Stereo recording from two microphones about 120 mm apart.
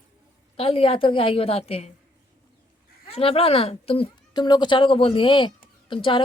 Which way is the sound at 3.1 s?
55° left (ahead or behind).